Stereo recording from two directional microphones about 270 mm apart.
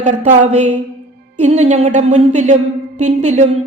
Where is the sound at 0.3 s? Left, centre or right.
Right.